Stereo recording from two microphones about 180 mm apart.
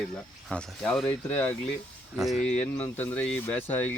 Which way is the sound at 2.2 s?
Centre (ahead or behind).